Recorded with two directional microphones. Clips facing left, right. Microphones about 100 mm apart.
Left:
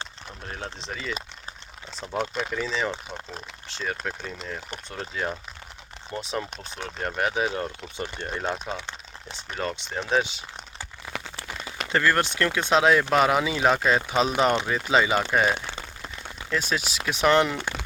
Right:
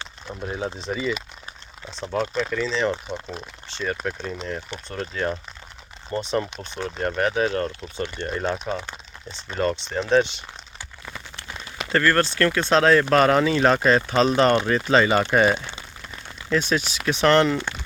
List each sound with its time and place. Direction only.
0.4 s speech: 10° right (ahead or behind)
2.1 s speech: 15° left (ahead or behind)
11.9 s speech: 15° left (ahead or behind)